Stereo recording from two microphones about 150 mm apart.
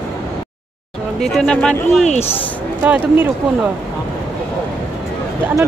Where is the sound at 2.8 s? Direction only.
10° right (ahead or behind).